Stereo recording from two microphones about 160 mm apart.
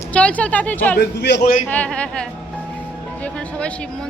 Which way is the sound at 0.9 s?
85° left.